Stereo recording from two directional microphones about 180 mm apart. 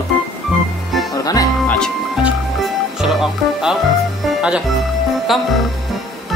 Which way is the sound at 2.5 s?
Centre (ahead or behind).